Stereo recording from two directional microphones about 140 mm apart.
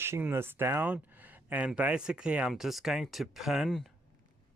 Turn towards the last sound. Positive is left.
turn(degrees=0)  # may be behind; listen again after turning